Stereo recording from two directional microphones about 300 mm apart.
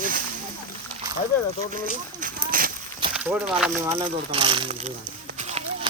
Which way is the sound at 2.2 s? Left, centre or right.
Right.